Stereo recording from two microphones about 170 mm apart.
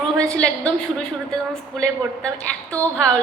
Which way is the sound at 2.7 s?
10° left (ahead or behind).